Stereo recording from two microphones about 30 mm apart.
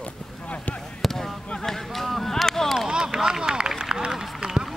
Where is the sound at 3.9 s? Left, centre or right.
Right.